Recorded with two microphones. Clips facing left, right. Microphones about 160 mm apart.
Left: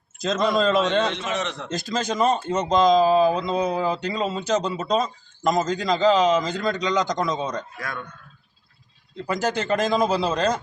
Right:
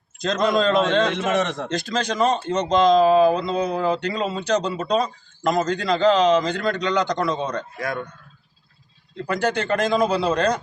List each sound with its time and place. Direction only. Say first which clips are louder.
0.2 s a man's voice: right 1 dB; centre (ahead or behind)
1.1 s a man's voice: right 6 dB; 55° right (ahead or behind)
1.9 s a man's voice: even; 5° left (ahead or behind)
7.8 s a man's voice: right 6 dB; 25° right (ahead or behind)
9.2 s a man's voice: right 2 dB; 5° left (ahead or behind)